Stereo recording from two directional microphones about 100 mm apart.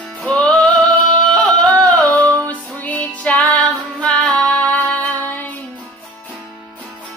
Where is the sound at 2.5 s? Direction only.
15° left (ahead or behind).